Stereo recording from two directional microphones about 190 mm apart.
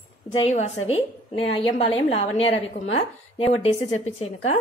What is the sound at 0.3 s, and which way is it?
A woman's voice, 30° left (ahead or behind).